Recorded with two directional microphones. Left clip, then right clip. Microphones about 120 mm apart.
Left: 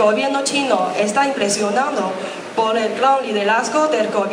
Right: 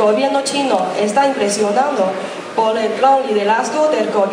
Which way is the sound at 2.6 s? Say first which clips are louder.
Right 2 dB; 25° left (ahead or behind).